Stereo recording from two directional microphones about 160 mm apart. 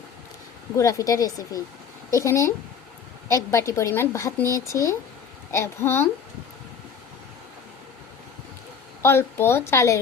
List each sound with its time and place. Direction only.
0.8 s a woman's voice: 20° left (ahead or behind)
9.0 s speech: 15° left (ahead or behind)